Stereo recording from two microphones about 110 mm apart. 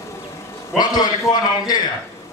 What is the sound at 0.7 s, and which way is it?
A man's voice, 35° left (ahead or behind).